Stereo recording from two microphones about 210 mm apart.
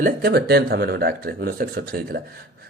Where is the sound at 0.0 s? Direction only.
45° right (ahead or behind).